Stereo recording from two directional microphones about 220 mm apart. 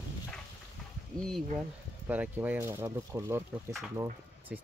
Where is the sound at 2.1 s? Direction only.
10° right (ahead or behind).